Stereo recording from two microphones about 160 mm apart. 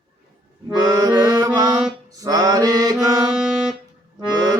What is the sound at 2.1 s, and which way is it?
Mantra, 25° right (ahead or behind).